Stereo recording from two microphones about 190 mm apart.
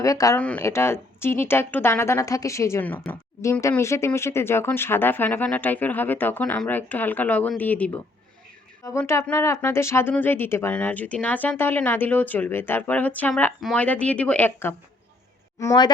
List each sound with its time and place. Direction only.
0.0 s speech: 15° left (ahead or behind)